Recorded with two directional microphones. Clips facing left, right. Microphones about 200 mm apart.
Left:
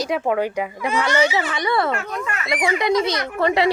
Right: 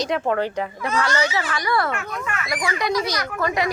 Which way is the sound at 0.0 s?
10° left (ahead or behind).